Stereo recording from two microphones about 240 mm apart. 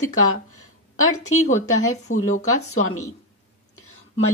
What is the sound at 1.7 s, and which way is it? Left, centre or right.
Speech, left.